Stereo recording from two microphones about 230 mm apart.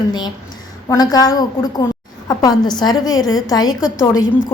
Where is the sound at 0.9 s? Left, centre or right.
Centre.